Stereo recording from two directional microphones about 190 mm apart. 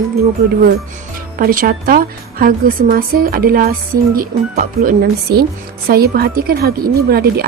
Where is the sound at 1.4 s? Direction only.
50° right (ahead or behind).